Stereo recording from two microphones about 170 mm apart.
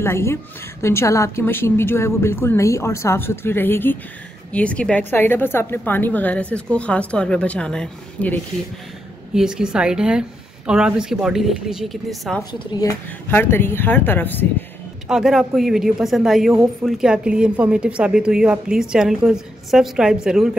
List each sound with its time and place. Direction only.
0.0 s a woman's voice: 15° left (ahead or behind)
9.3 s a woman's voice: 5° right (ahead or behind)
12.5 s speech: 25° left (ahead or behind)
13.3 s a woman's voice: 10° left (ahead or behind)
15.0 s a woman's voice: 5° right (ahead or behind)